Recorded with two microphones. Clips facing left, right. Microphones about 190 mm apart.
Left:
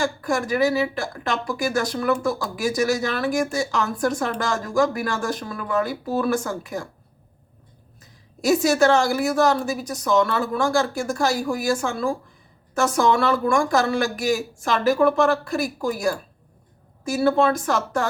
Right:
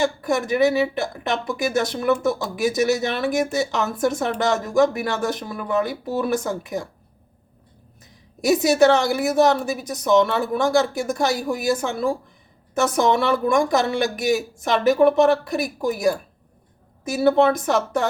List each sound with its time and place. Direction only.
0.0 s a woman's voice: 20° right (ahead or behind)
8.4 s a woman's voice: 20° right (ahead or behind)